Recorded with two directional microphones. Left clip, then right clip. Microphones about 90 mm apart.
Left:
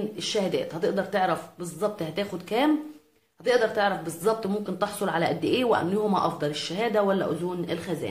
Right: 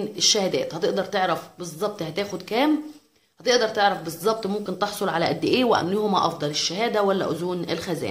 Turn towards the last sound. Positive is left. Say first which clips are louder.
# right 3 dB
turn(degrees=-50)  # may be behind; listen again after turning